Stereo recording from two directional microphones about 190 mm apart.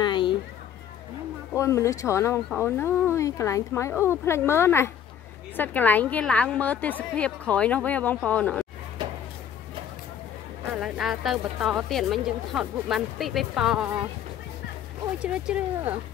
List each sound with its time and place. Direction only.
0.0 s a sound: 25° left (ahead or behind)
1.5 s a woman's voice: 15° left (ahead or behind)
10.7 s a woman's voice: centre (ahead or behind)
15.2 s speech: 5° right (ahead or behind)